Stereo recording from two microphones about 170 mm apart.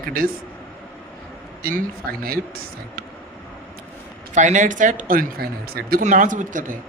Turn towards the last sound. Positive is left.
turn(degrees=-50)  # may be behind; listen again after turning